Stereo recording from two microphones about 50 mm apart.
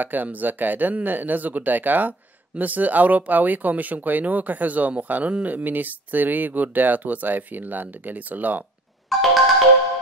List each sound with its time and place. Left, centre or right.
0.0 s speech: right
9.1 s music: centre